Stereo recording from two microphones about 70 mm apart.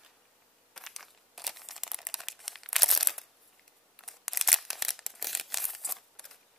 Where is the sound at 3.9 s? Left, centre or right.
Centre.